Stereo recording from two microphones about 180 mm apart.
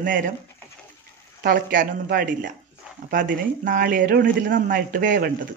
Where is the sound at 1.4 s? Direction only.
50° right (ahead or behind).